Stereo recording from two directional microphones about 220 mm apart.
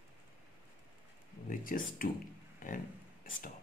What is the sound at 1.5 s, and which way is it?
Speech, 40° left (ahead or behind).